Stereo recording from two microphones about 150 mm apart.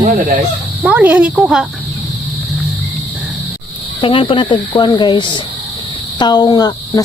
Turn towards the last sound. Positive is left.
turn(degrees=25)  # may be behind; listen again after turning